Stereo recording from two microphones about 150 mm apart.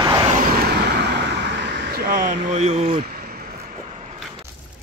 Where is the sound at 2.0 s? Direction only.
90° right.